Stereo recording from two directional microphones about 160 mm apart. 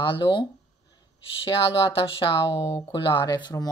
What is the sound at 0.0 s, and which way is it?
Speech, 30° left (ahead or behind).